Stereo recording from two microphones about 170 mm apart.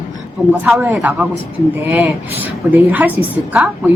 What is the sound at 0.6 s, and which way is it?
A woman's voice, 15° right (ahead or behind).